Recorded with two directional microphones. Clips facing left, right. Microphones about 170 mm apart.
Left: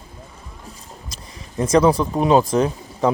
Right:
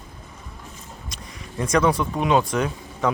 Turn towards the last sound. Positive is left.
turn(degrees=30)  # may be behind; listen again after turning